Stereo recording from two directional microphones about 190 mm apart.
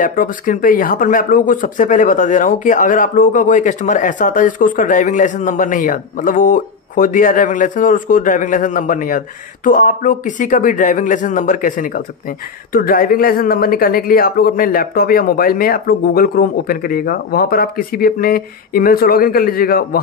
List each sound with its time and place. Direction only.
0.0 s speech: 45° left (ahead or behind)